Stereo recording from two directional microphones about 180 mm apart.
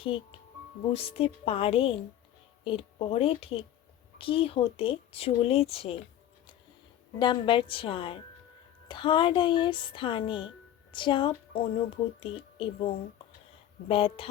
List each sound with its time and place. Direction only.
0.0 s a woman's voice: 30° left (ahead or behind)
7.2 s a woman's voice: 25° left (ahead or behind)